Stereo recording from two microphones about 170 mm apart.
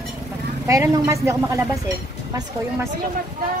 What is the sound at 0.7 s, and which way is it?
Speech, 15° right (ahead or behind).